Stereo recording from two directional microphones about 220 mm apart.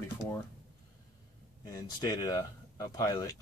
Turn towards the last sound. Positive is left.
turn(degrees=15)  # may be behind; listen again after turning